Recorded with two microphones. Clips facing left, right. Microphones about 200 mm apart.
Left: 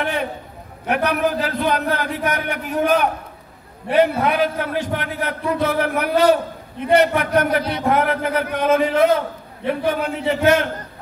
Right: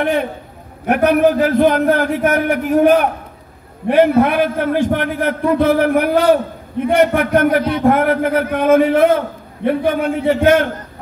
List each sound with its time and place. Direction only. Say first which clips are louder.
0.8 s a man's voice: right 7 dB; 50° right (ahead or behind)